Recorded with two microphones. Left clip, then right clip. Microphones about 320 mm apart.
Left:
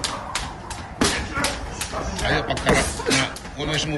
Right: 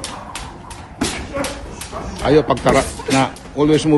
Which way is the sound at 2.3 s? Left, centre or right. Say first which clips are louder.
Right 10 dB; centre.